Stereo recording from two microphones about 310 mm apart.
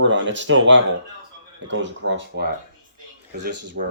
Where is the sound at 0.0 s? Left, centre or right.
Right.